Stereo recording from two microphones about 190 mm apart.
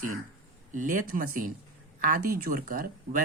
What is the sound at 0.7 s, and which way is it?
Speech, 45° right (ahead or behind).